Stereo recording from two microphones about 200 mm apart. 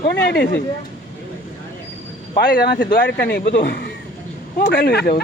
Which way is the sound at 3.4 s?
45° left (ahead or behind).